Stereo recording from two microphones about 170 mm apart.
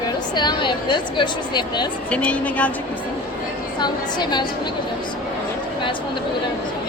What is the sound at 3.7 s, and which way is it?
Speech, 25° left (ahead or behind).